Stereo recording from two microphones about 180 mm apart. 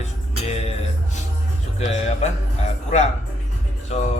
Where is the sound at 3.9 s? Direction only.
35° left (ahead or behind).